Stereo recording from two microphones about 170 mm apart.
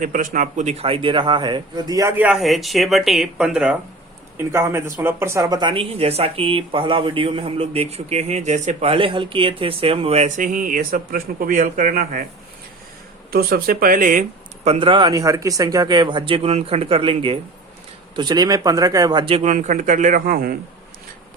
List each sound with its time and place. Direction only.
0.0 s a man's voice: 50° right (ahead or behind)
13.3 s speech: 60° right (ahead or behind)